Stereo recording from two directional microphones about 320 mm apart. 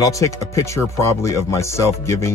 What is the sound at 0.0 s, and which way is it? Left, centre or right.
Speech, centre.